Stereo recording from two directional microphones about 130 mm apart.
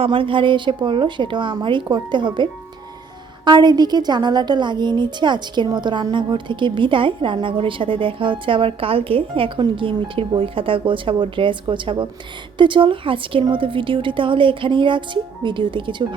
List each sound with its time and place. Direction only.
0.0 s a woman's voice: 40° right (ahead or behind)